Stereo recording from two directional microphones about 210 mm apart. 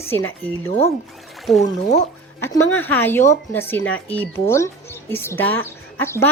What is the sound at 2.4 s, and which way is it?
Speech, 10° left (ahead or behind).